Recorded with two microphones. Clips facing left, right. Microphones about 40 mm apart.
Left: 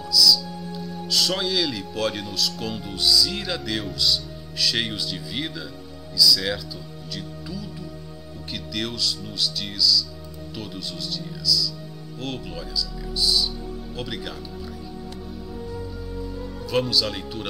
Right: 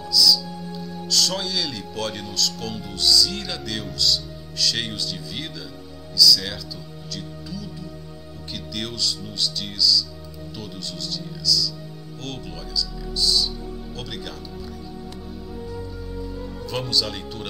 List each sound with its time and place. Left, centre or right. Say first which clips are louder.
0.1 s music: even; centre
1.0 s speech: left 1 dB; centre
8.7 s speech: left 1 dB; centre
15.7 s music: even; centre